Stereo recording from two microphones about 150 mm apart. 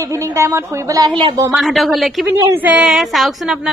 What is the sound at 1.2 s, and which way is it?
Speech, 35° right (ahead or behind).